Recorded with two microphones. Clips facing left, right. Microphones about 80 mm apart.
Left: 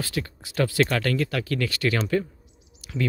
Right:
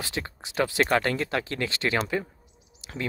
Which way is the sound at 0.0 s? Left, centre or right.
Right.